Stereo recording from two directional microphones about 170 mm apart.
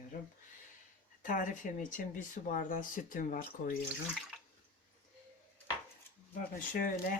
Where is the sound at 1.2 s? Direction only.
50° left (ahead or behind).